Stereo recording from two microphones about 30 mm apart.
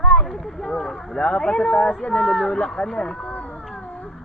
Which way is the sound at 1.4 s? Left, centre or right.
Left.